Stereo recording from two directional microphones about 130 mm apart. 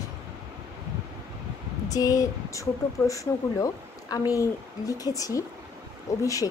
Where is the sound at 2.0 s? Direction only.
25° left (ahead or behind).